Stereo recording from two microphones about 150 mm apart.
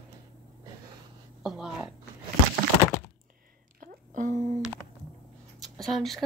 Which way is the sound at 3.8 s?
60° right (ahead or behind).